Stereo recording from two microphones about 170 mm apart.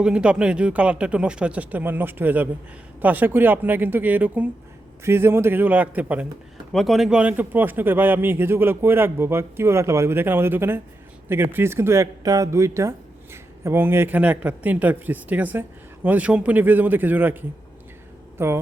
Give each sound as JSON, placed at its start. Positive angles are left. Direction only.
{"t": 0.0, "sound": "speech", "side_deg": -5}